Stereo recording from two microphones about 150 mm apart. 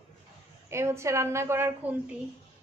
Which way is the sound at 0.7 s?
20° right (ahead or behind).